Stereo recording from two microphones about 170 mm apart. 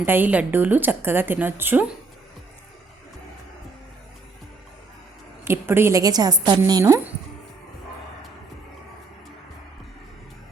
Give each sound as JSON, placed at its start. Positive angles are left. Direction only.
{"t": 0.0, "sound": "speech", "side_deg": -10}
{"t": 5.5, "sound": "a woman's voice", "side_deg": -15}